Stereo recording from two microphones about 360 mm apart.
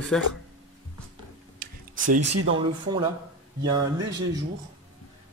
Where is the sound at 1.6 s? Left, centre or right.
Right.